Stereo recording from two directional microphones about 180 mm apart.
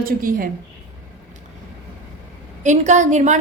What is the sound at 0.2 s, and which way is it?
Speech, 50° right (ahead or behind).